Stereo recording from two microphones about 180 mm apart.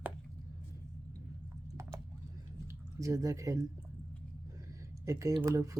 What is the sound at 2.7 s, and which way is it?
Speech, 15° right (ahead or behind).